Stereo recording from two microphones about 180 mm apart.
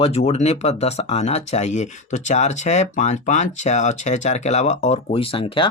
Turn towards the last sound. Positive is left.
turn(degrees=30)  # may be behind; listen again after turning